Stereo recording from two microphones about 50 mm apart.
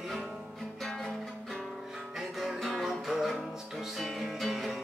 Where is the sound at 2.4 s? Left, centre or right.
Centre.